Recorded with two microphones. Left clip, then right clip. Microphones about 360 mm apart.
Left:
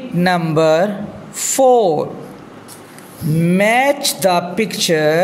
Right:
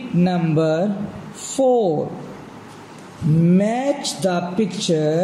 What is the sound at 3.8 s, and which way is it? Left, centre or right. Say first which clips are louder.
Speech: left 7 dB; centre.